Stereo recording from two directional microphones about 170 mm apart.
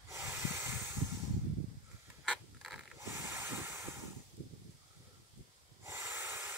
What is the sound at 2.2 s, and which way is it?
Mechanisms, centre (ahead or behind).